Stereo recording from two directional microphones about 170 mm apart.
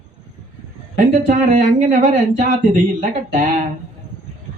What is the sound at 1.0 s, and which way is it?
Speech, 55° right (ahead or behind).